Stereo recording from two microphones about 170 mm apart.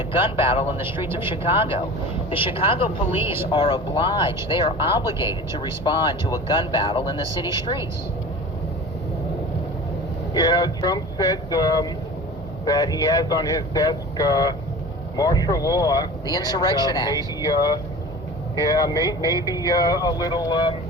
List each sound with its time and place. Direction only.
0.1 s speech: 30° left (ahead or behind)
1.0 s speech: 15° right (ahead or behind)
1.5 s speech: 30° left (ahead or behind)
10.3 s speech: 25° left (ahead or behind)